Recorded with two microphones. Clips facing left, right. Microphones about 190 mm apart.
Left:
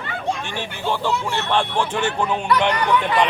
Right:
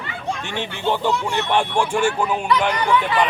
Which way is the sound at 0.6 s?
20° right (ahead or behind).